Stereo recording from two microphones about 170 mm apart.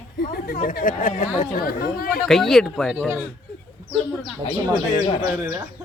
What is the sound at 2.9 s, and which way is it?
Speech, 10° right (ahead or behind).